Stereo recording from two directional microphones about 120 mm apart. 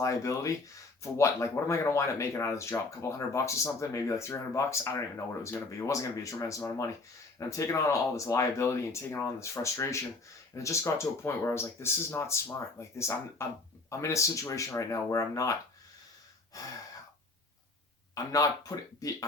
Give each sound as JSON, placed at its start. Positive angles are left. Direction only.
{"t": 0.0, "sound": "speech", "side_deg": 25}
{"t": 16.5, "sound": "speech", "side_deg": 30}
{"t": 18.1, "sound": "speech", "side_deg": 30}